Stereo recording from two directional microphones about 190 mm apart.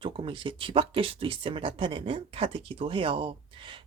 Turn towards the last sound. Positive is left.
turn(degrees=-25)  # may be behind; listen again after turning